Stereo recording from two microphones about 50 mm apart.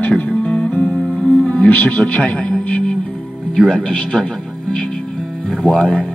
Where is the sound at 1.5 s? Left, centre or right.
Left.